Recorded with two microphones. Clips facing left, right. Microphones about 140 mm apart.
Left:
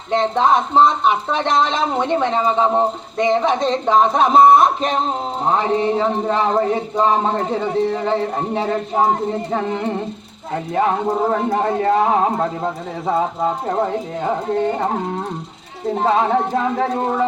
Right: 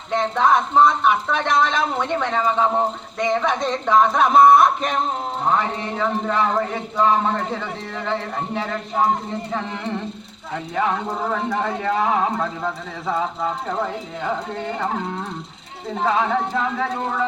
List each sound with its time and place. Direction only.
0.1 s speech: 25° left (ahead or behind)